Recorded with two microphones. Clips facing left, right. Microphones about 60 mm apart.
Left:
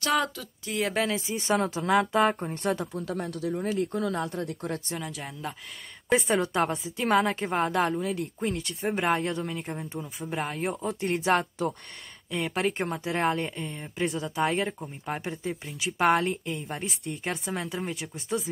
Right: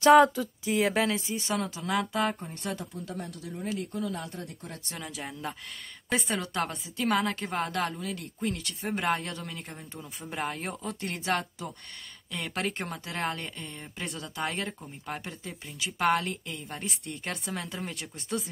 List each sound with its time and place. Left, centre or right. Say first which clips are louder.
0.1 s speech: right 8 dB; centre
1.5 s speech: left 7 dB; left
2.8 s speech: left 6 dB; left
3.6 s speech: left 2 dB; left
4.8 s speech: left 3 dB; centre; by 8.6 s left
8.8 s speech: left 3 dB; centre
11.1 s speech: left 5 dB; left
12.3 s speech: left 5 dB; centre